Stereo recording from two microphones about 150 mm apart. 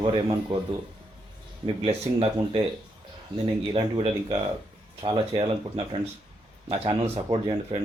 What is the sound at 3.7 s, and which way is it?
Speech, 35° right (ahead or behind).